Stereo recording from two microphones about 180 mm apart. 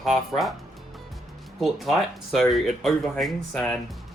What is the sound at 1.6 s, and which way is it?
Speech, centre (ahead or behind).